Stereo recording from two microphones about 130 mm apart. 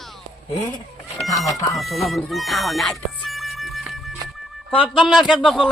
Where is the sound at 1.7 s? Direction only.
Centre (ahead or behind).